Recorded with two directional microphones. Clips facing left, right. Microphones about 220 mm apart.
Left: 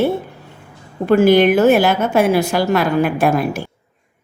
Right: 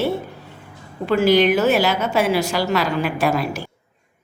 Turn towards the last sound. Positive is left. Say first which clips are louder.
# left 4 dB
turn(degrees=55)  # may be behind; listen again after turning